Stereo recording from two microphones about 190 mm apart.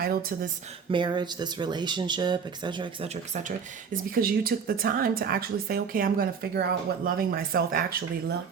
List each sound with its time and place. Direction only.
0.0 s a woman's voice: 50° right (ahead or behind)
0.9 s speech: 25° right (ahead or behind)
3.9 s a woman's voice: 50° right (ahead or behind)